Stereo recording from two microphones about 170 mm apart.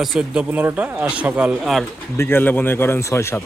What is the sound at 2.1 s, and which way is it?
Speech, 15° left (ahead or behind).